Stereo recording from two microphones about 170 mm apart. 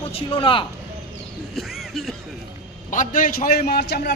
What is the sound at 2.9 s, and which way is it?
Speech, 50° left (ahead or behind).